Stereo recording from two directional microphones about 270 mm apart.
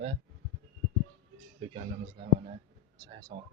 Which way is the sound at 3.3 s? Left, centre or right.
Centre.